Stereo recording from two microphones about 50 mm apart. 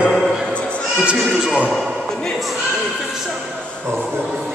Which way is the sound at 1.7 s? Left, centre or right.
Centre.